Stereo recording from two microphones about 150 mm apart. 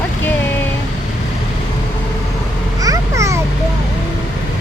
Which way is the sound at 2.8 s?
20° right (ahead or behind).